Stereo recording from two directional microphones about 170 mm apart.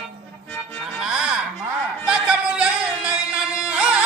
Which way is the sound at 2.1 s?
5° right (ahead or behind).